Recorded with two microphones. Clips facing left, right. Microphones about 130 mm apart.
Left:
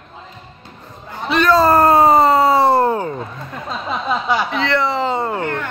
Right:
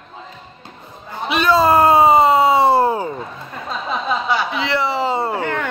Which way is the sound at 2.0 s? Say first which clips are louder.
Even; centre (ahead or behind).